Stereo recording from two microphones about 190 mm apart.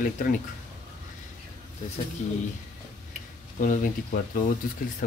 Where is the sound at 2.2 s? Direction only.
40° left (ahead or behind).